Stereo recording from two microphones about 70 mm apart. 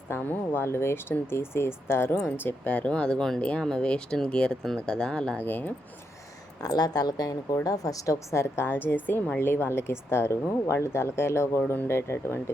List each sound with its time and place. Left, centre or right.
0.1 s speech: left
2.7 s speech: centre
5.4 s speech: left
6.6 s speech: left